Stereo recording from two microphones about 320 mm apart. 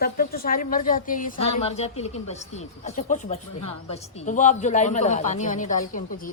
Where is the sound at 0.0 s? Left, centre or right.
Left.